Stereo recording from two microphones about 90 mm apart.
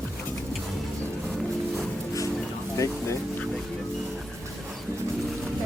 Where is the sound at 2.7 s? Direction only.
35° left (ahead or behind).